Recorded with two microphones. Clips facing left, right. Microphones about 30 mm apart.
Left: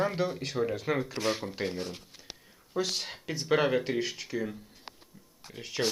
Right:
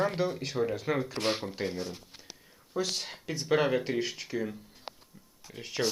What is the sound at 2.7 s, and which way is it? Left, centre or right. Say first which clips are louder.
Speech: left 1 dB; centre.